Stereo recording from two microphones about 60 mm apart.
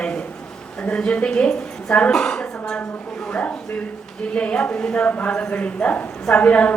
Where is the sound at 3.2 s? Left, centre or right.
Left.